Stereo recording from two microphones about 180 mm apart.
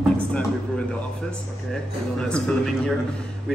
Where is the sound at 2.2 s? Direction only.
5° left (ahead or behind).